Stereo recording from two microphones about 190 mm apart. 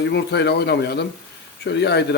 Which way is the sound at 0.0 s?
60° left (ahead or behind).